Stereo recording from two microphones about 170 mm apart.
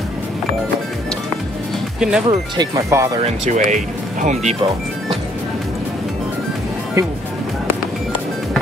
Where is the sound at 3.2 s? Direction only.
45° right (ahead or behind).